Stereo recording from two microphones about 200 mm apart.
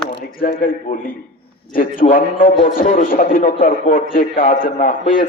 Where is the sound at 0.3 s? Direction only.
45° left (ahead or behind).